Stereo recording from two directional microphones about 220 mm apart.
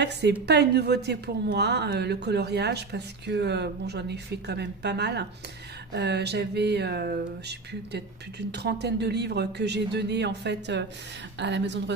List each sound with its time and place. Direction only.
0.0 s speech: 50° right (ahead or behind)